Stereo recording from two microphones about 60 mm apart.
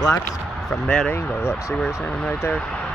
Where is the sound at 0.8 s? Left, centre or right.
Centre.